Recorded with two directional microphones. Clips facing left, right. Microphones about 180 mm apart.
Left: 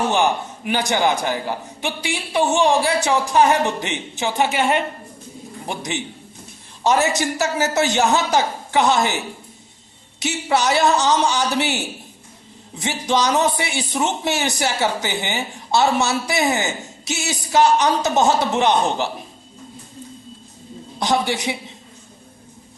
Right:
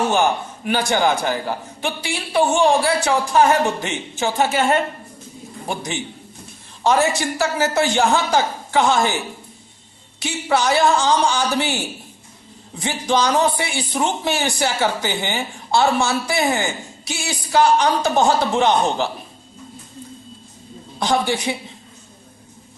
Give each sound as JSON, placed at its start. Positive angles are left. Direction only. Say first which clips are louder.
{"t": 0.1, "sound": "a woman's voice", "louder": "right 1 dB", "side_deg": 15}
{"t": 10.2, "sound": "a woman's voice", "louder": "even", "side_deg": 20}
{"t": 12.8, "sound": "a woman's voice", "louder": "right 1 dB", "side_deg": 20}
{"t": 21.0, "sound": "a woman's voice", "louder": "right 1 dB", "side_deg": 20}